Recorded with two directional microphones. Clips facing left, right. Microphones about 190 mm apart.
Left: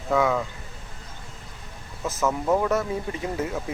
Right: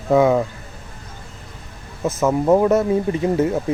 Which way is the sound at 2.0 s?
25° right (ahead or behind).